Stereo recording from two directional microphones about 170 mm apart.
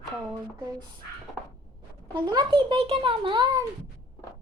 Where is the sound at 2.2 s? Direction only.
25° right (ahead or behind).